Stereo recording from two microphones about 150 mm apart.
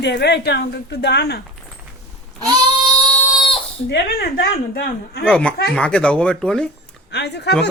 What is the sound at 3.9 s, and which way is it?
Speech, 90° left.